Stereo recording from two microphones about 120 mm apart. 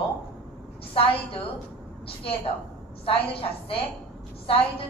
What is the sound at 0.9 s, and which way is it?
Speech, 50° left (ahead or behind).